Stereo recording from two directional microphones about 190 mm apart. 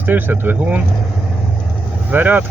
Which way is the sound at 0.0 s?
10° right (ahead or behind).